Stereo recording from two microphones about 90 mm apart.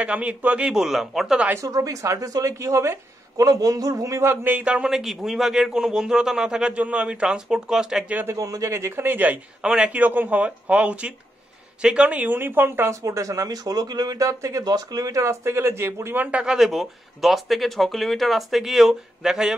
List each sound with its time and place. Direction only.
0.0 s speech: 15° right (ahead or behind)
1.5 s speech: 35° right (ahead or behind); by 8.0 s 5° right (ahead or behind)
8.1 s a man's voice: 20° right (ahead or behind)
8.4 s a man's voice: 40° right (ahead or behind)
16.3 s speech: 10° right (ahead or behind)